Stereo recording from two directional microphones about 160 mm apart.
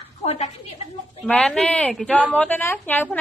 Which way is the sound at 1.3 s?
5° left (ahead or behind).